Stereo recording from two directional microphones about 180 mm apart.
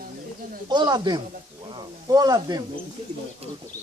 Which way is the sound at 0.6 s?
25° right (ahead or behind).